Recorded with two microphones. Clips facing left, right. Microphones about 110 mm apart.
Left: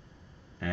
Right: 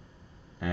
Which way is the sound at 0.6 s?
15° right (ahead or behind).